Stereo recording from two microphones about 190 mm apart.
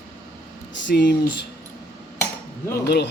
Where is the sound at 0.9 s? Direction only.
70° left (ahead or behind).